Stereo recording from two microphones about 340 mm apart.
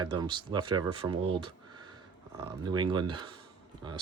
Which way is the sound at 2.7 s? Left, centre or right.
Centre.